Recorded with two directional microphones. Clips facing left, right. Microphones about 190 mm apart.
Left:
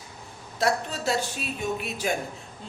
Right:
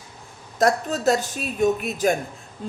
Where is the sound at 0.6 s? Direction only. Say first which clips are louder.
Right 6 dB; 45° right (ahead or behind).